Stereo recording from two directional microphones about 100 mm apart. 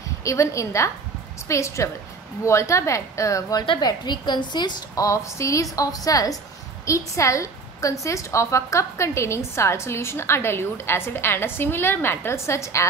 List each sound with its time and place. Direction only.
0.2 s a woman's voice: 30° left (ahead or behind)
3.6 s a woman's voice: 50° left (ahead or behind)
4.9 s a woman's voice: 30° left (ahead or behind)